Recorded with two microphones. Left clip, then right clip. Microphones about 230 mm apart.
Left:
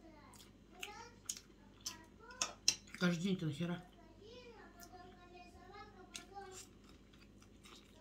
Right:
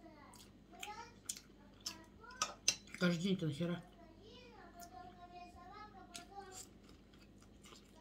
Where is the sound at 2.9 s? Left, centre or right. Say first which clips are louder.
Right 1 dB; centre.